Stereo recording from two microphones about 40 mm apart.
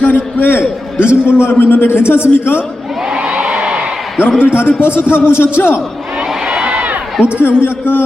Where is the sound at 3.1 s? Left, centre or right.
Centre.